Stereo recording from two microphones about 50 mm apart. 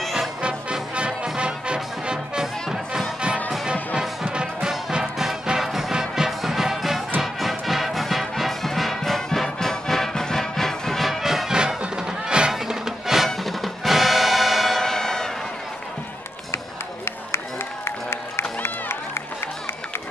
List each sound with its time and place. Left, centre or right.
0.0 s music: centre
0.4 s music: centre
2.4 s music: centre
3.6 s music: centre
5.2 s music: centre
16.5 s run: left
17.8 s music: left